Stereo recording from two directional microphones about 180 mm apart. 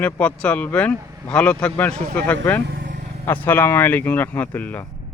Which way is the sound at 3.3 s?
10° left (ahead or behind).